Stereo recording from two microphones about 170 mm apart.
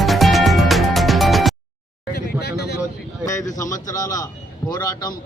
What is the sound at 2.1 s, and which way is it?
Vehicle, 70° left (ahead or behind).